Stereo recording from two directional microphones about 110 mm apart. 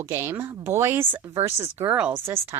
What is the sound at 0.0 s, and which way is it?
Speech, 25° right (ahead or behind).